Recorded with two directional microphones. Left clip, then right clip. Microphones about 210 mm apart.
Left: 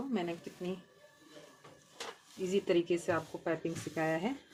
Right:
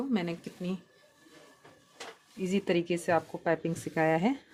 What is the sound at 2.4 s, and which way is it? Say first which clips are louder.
Speech: right 1 dB; 55° right (ahead or behind).